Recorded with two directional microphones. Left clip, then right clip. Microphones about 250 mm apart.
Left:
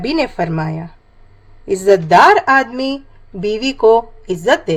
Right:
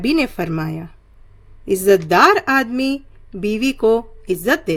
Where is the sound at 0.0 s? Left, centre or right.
Right.